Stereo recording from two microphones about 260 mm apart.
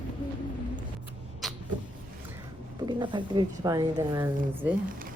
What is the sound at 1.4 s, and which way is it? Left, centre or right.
Cat, centre.